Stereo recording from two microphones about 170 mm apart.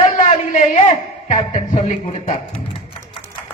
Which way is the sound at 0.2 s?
45° left (ahead or behind).